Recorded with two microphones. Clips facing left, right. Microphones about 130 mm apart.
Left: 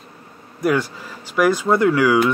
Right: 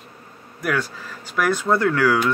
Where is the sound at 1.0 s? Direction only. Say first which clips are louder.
Left 5 dB; 10° left (ahead or behind).